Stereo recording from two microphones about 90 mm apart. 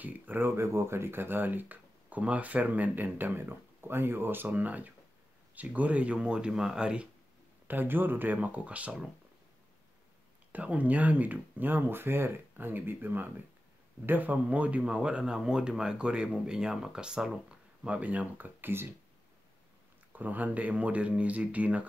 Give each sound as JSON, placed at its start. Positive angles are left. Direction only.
{"t": 0.0, "sound": "speech", "side_deg": -20}
{"t": 7.6, "sound": "speech", "side_deg": -20}
{"t": 10.5, "sound": "speech", "side_deg": -15}
{"t": 20.1, "sound": "speech", "side_deg": -20}